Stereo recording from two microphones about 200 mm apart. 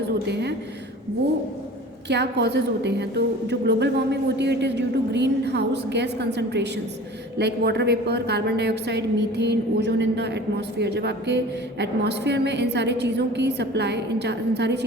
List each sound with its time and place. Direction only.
0.3 s a woman's voice: 55° right (ahead or behind)
2.0 s a woman's voice: 60° right (ahead or behind)